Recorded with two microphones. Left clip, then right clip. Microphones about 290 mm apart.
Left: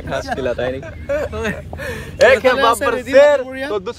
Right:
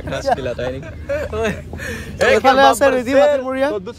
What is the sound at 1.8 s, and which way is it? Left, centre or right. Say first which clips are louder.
Speech: left 5 dB; centre.